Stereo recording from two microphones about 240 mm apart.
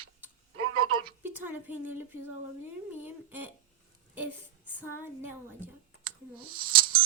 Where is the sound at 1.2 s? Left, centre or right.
Centre.